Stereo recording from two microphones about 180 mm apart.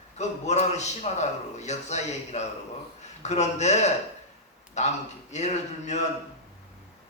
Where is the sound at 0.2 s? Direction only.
40° left (ahead or behind).